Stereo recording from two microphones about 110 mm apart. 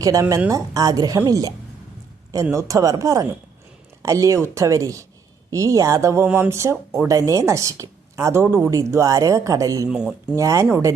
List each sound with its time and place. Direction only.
0.0 s a woman's voice: 30° right (ahead or behind)
9.9 s speech: 10° right (ahead or behind)
10.3 s a woman's voice: 30° right (ahead or behind)